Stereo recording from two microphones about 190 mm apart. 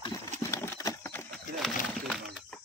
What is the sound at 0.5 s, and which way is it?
Horse, 15° left (ahead or behind).